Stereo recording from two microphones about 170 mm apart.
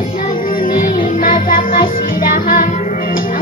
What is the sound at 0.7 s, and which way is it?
Music, 55° left (ahead or behind).